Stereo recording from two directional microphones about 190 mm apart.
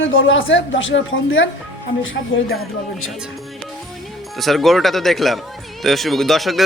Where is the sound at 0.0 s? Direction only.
90° left.